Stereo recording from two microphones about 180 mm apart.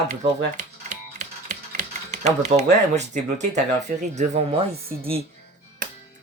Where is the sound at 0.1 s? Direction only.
45° right (ahead or behind).